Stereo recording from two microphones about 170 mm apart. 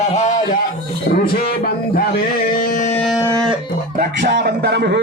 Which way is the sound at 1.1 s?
65° left (ahead or behind).